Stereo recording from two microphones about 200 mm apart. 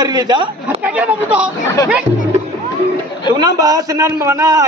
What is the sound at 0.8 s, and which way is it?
Speech, 5° right (ahead or behind).